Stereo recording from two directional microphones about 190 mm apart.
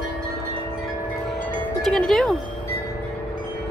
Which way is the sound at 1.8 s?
Centre (ahead or behind).